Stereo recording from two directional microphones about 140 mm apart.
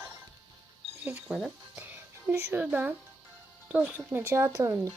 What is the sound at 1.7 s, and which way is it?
Music, 15° right (ahead or behind).